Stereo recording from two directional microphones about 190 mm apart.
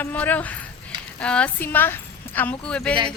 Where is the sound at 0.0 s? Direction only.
10° left (ahead or behind).